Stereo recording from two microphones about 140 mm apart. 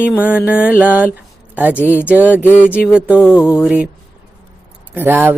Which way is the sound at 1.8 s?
15° left (ahead or behind).